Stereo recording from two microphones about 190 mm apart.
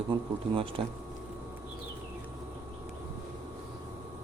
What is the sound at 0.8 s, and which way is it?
Speech, 30° right (ahead or behind).